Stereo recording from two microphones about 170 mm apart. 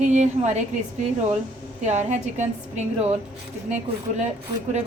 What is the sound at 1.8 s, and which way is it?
A woman's voice, 45° right (ahead or behind).